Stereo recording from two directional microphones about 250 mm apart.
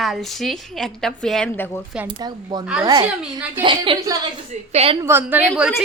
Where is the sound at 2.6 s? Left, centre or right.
Centre.